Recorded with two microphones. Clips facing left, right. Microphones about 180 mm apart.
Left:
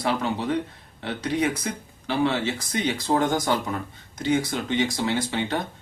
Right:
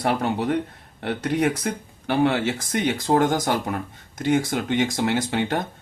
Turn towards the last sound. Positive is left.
turn(degrees=-55)  # may be behind; listen again after turning